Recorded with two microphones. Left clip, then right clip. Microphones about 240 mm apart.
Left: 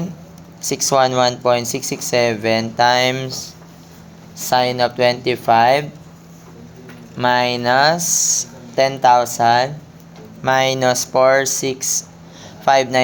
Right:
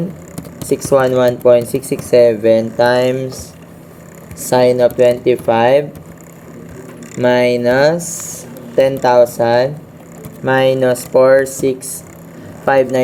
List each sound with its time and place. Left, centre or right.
0.8 s speech: centre
4.4 s speech: centre
7.2 s speech: centre
11.5 s speech: left
12.6 s speech: centre